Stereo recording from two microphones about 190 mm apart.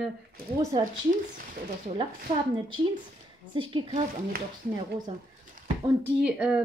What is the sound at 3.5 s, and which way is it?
Speech, 25° right (ahead or behind).